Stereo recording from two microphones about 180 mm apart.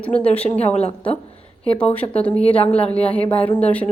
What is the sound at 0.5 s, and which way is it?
Speech, 35° left (ahead or behind).